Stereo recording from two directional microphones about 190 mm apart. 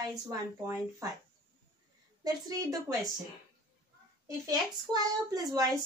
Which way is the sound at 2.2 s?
20° right (ahead or behind).